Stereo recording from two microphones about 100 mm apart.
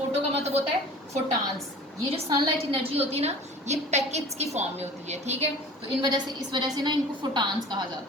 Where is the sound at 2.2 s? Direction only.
45° right (ahead or behind).